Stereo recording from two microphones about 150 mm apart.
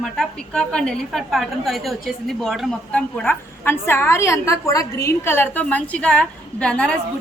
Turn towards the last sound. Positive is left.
turn(degrees=5)  # may be behind; listen again after turning